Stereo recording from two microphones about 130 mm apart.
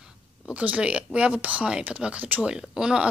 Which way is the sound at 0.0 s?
10° right (ahead or behind).